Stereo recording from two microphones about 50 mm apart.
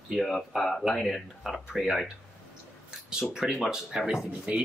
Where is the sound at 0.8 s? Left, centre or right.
Centre.